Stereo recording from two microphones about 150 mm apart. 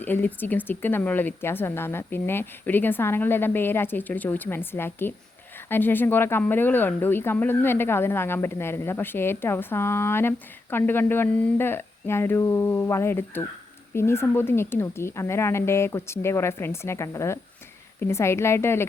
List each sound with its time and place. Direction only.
0.0 s speech: 10° left (ahead or behind)